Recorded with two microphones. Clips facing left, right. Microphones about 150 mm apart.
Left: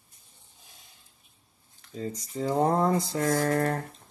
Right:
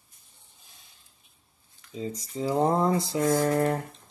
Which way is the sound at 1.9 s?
Centre (ahead or behind).